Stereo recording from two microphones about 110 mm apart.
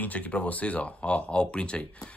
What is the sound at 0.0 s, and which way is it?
Speech, 15° left (ahead or behind).